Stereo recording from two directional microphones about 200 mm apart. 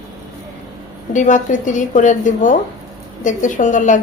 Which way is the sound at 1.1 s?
40° left (ahead or behind).